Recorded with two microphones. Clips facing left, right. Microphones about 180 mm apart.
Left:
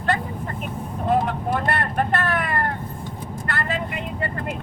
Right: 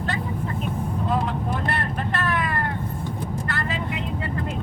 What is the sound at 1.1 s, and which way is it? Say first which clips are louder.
Vehicle: left 6 dB; 55° left (ahead or behind).